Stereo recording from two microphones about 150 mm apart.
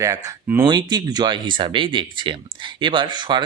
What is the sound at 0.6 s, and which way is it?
Speech, 30° right (ahead or behind).